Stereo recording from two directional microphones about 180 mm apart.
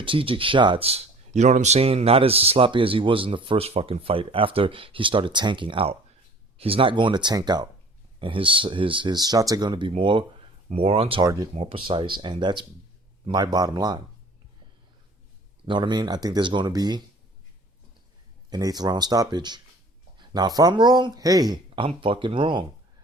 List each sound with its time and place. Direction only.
0.0 s speech: 30° right (ahead or behind)
15.6 s speech: 25° right (ahead or behind)
18.5 s speech: 20° right (ahead or behind)